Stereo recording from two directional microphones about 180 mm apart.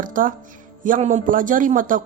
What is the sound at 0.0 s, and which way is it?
A woman's voice, 50° right (ahead or behind).